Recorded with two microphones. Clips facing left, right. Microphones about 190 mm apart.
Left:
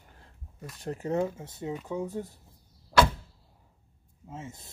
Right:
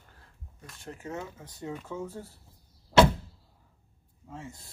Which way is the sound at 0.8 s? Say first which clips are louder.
Left 9 dB; 40° left (ahead or behind).